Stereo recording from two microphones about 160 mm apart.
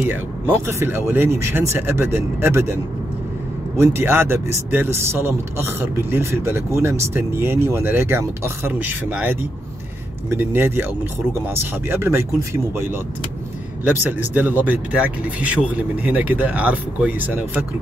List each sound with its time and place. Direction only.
0.1 s speech: 15° right (ahead or behind)
13.8 s speech: 10° right (ahead or behind)